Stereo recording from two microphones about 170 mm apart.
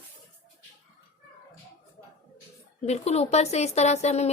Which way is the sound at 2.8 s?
40° left (ahead or behind).